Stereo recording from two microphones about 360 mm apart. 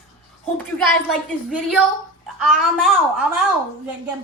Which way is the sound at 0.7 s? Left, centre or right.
Centre.